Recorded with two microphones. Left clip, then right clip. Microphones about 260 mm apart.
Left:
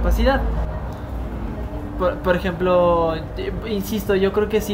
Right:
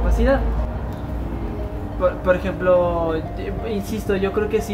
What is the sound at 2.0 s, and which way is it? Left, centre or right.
Speech, left.